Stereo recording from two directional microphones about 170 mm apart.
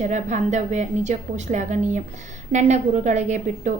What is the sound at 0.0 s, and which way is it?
A woman's voice, 45° right (ahead or behind).